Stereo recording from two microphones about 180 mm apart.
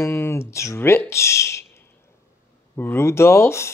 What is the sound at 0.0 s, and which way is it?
Speech, 15° left (ahead or behind).